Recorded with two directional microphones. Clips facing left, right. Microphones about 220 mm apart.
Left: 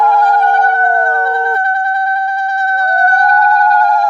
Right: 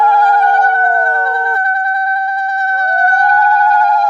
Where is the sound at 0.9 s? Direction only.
25° left (ahead or behind).